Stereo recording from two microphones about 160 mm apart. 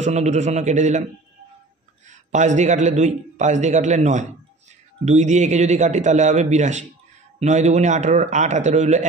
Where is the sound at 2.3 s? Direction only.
50° right (ahead or behind).